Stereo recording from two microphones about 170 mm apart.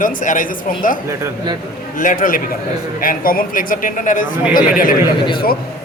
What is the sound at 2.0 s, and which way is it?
Speech, 50° left (ahead or behind).